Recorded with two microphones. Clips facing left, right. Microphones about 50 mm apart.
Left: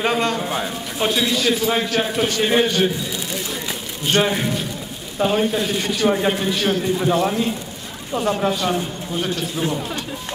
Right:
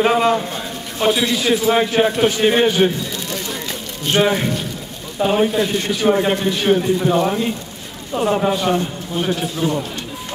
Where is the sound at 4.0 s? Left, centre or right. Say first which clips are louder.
Right 2 dB; centre.